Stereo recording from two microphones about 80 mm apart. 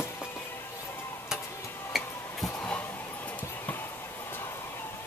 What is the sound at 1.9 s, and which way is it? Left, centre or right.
Tick-tock, centre.